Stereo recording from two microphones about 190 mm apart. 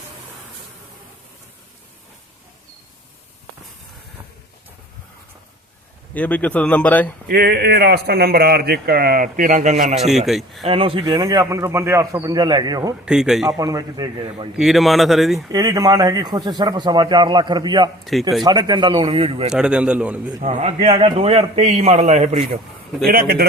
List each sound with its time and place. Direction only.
6.1 s speech: 10° left (ahead or behind)
7.3 s speech: 55° right (ahead or behind); by 10.0 s 40° right (ahead or behind)
10.0 s speech: centre (ahead or behind)
10.7 s speech: 30° right (ahead or behind)
13.1 s speech: 5° right (ahead or behind)
13.6 s speech: 20° right (ahead or behind)
14.5 s speech: centre (ahead or behind)
15.4 s speech: 20° right (ahead or behind)
18.0 s speech: centre (ahead or behind)
18.4 s speech: 20° right (ahead or behind)
19.5 s speech: 5° right (ahead or behind)
20.4 s a man's voice: 35° right (ahead or behind)
23.0 s speech: 50° right (ahead or behind)